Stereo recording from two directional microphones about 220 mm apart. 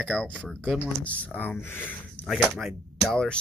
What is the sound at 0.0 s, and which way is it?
Speech, 5° left (ahead or behind).